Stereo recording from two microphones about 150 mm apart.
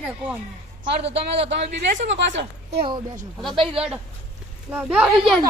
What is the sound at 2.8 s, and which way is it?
Speech, 30° right (ahead or behind).